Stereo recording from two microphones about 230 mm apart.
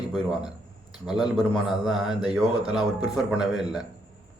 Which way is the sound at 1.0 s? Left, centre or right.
Centre.